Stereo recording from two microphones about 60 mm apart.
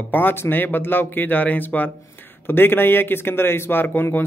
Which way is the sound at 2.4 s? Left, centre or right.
Left.